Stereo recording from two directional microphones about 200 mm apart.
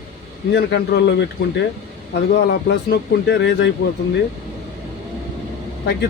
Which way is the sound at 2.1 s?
60° left (ahead or behind).